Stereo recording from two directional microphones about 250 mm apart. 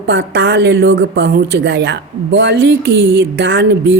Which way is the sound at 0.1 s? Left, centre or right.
Right.